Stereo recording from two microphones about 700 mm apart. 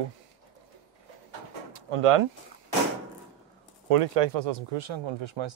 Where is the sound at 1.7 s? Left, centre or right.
Right.